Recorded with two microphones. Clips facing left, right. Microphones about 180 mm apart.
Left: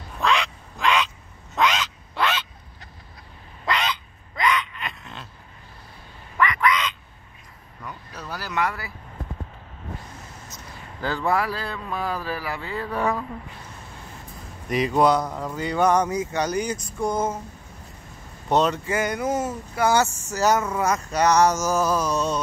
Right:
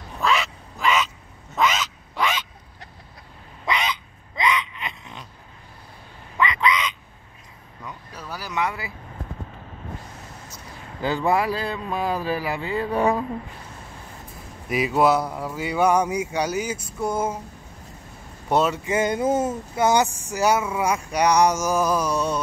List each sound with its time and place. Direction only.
0.2 s quack: 5° right (ahead or behind)
4.4 s gasp: 20° right (ahead or behind)
6.3 s quack: 20° right (ahead or behind)
8.1 s a sound: 10° right (ahead or behind)
8.6 s speech: 20° right (ahead or behind)
11.0 s speech: 15° right (ahead or behind)
14.7 s speech: 5° right (ahead or behind)
18.5 s speech: 10° right (ahead or behind)
18.9 s speech: 25° right (ahead or behind)